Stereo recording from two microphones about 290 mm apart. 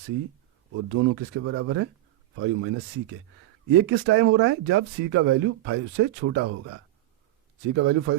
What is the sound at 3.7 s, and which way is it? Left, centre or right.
Speech, right.